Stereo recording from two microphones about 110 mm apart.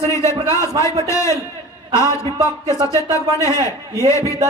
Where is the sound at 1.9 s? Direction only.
35° right (ahead or behind).